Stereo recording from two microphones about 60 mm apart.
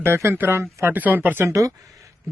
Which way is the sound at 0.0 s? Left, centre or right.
Right.